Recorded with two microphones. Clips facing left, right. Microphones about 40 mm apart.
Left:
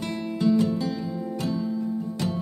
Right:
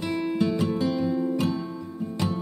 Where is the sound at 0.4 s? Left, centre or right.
Right.